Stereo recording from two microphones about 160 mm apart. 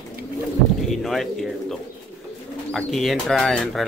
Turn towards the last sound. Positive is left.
turn(degrees=0)  # may be behind; listen again after turning